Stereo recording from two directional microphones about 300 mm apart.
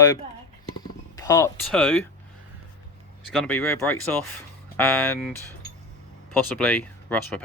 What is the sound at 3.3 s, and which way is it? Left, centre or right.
Speech, centre.